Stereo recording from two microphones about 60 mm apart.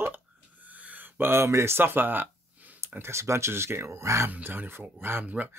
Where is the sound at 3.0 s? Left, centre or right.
Right.